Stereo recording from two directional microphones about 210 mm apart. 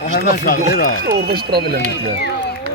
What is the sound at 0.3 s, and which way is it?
Speech, 45° left (ahead or behind).